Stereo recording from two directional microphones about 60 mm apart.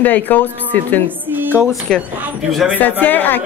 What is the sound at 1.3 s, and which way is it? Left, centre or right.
Speech, right.